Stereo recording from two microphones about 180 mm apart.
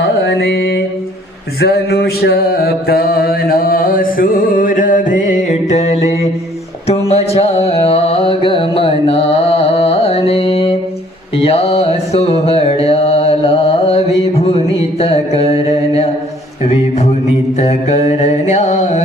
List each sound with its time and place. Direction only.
0.3 s mantra: 65° left (ahead or behind); by 6.1 s 40° left (ahead or behind)
7.1 s music: 35° left (ahead or behind)
11.3 s mantra: 35° left (ahead or behind)
17.6 s mantra: 40° left (ahead or behind)